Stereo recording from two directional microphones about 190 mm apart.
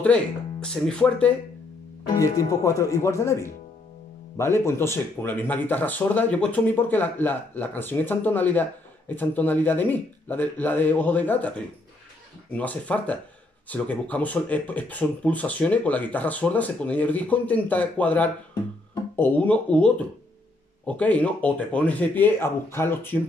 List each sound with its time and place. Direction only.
0.0 s speech: 5° left (ahead or behind)
2.1 s speech: 15° left (ahead or behind)